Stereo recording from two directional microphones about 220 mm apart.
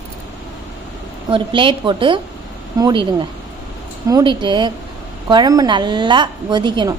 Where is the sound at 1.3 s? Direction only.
20° right (ahead or behind).